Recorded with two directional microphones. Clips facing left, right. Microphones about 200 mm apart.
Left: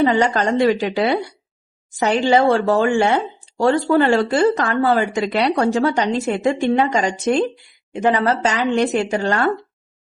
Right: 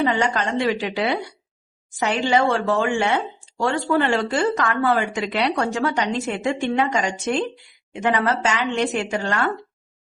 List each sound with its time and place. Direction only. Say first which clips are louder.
0.0 s speech: left 5 dB; 40° left (ahead or behind)